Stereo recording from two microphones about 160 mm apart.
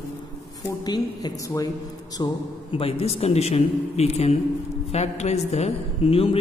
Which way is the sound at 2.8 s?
35° left (ahead or behind).